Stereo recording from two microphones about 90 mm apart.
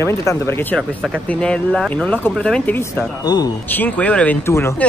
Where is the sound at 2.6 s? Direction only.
20° left (ahead or behind).